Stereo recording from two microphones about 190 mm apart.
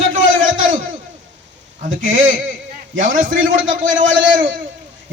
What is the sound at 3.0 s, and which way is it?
A man's voice, 45° right (ahead or behind).